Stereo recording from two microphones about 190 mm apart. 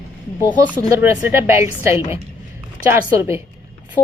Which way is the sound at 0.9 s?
10° right (ahead or behind).